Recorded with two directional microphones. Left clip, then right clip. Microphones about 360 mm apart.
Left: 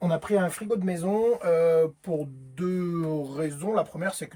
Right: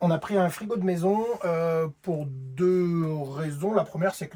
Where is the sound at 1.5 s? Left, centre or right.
Centre.